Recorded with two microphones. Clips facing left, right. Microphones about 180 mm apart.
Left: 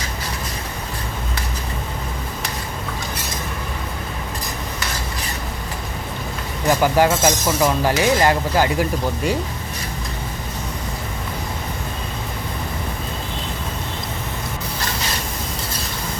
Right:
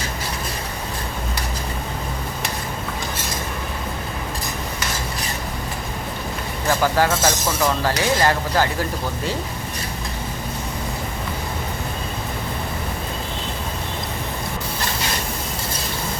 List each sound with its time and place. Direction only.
6.7 s speech: 15° left (ahead or behind)